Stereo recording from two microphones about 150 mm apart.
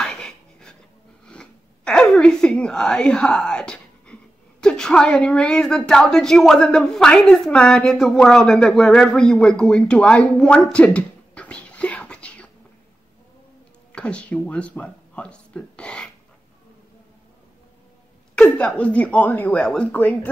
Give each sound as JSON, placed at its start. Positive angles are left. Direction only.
{"t": 0.0, "sound": "a sound", "side_deg": 5}
{"t": 1.2, "sound": "speech", "side_deg": 5}
{"t": 13.9, "sound": "speech", "side_deg": 10}
{"t": 18.3, "sound": "speech", "side_deg": 5}